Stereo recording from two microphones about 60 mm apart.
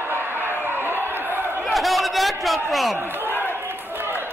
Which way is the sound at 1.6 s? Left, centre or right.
Centre.